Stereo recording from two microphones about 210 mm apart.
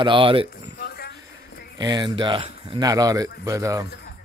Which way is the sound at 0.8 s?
50° left (ahead or behind).